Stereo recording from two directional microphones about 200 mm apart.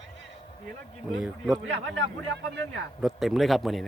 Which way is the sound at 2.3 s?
60° right (ahead or behind).